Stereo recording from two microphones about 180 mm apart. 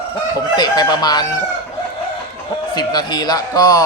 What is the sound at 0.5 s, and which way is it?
Speech, 25° left (ahead or behind).